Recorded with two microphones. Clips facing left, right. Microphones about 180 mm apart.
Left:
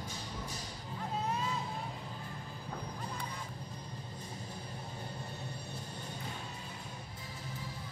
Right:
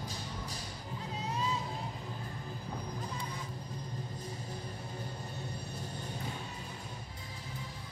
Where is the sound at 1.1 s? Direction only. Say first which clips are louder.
Left 1 dB; 55° left (ahead or behind).